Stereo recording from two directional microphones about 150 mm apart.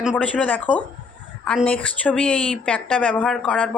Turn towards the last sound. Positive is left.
turn(degrees=5)  # may be behind; listen again after turning